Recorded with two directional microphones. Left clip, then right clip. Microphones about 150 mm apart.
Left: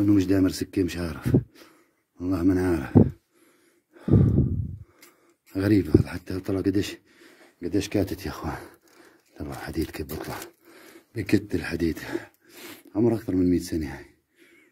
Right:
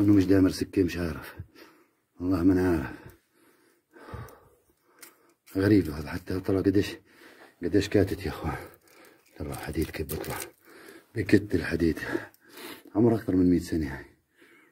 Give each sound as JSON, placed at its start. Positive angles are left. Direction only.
{"t": 0.0, "sound": "speech", "side_deg": 20}
{"t": 3.9, "sound": "sigh", "side_deg": 25}
{"t": 5.5, "sound": "speech", "side_deg": 25}